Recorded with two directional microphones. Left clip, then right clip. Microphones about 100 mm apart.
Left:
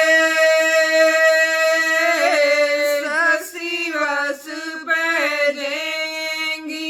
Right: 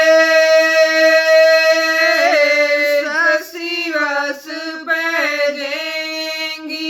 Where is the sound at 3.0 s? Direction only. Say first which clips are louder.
Right 3 dB; 45° left (ahead or behind).